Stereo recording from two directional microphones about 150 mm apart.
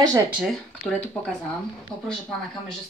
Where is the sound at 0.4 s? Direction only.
Centre (ahead or behind).